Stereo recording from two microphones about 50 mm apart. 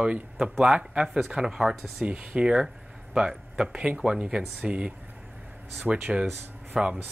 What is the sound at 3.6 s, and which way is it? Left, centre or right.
Speech, right.